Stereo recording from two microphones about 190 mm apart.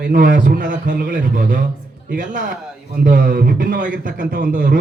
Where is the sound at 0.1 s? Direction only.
45° right (ahead or behind).